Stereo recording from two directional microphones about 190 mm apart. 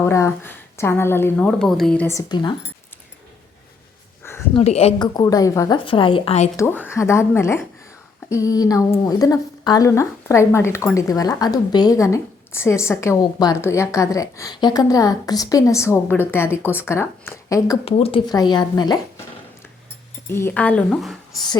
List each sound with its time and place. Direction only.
0.0 s a woman's voice: 15° left (ahead or behind)
1.5 s a woman's voice: centre (ahead or behind); by 2.6 s 25° left (ahead or behind)
4.2 s a sound: 15° left (ahead or behind)
4.5 s speech: 35° left (ahead or behind)
5.1 s a woman's voice: 20° left (ahead or behind)
6.6 s a woman's voice: 10° left (ahead or behind)
17.8 s a woman's voice: 30° left (ahead or behind)
20.2 s a woman's voice: 10° left (ahead or behind)